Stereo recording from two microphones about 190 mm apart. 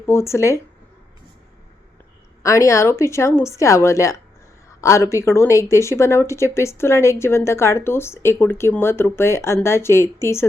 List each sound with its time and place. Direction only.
0.0 s speech: 15° left (ahead or behind)
2.4 s speech: 15° left (ahead or behind)